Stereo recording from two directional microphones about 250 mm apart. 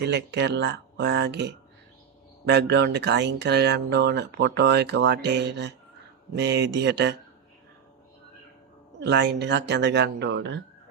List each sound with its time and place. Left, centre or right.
0.0 s speech: right
9.0 s speech: right